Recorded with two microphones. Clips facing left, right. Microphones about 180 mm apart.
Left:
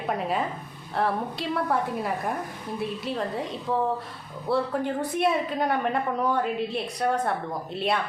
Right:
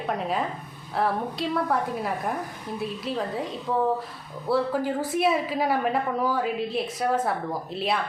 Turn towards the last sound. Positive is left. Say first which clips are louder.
# even
turn(degrees=0)  # may be behind; listen again after turning